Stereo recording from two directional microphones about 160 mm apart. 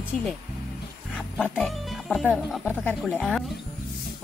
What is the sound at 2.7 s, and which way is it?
Speech, 10° left (ahead or behind).